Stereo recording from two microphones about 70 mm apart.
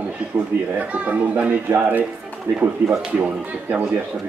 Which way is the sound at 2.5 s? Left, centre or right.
Right.